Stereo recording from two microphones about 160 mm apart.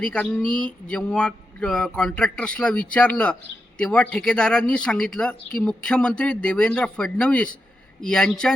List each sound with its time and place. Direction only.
0.0 s speech: 5° left (ahead or behind)